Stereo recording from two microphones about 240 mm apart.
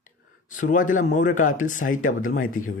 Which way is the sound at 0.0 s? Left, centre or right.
Left.